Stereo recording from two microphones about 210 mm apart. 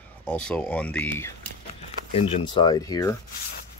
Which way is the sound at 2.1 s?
20° left (ahead or behind).